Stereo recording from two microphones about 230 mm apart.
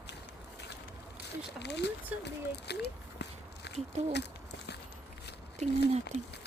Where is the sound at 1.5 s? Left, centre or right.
Left.